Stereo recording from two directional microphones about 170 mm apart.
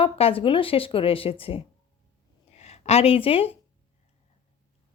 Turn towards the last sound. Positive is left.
turn(degrees=35)  # may be behind; listen again after turning